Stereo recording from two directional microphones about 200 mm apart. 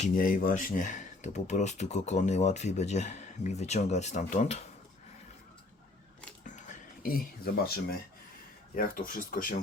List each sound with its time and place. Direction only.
0.0 s speech: 45° left (ahead or behind)
6.4 s a sound: 40° left (ahead or behind)
8.7 s speech: 45° left (ahead or behind)